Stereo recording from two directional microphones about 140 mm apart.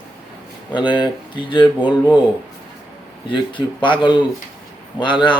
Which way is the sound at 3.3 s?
35° left (ahead or behind).